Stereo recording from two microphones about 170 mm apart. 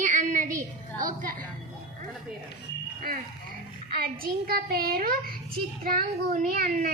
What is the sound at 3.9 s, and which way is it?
A child's voice, 60° right (ahead or behind).